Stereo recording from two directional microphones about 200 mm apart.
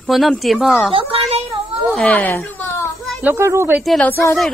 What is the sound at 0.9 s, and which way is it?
Speech, 30° right (ahead or behind).